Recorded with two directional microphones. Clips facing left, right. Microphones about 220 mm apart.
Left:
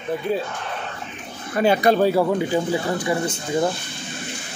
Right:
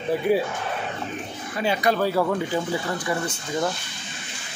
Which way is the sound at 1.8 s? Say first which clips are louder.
Left 5 dB; 25° left (ahead or behind).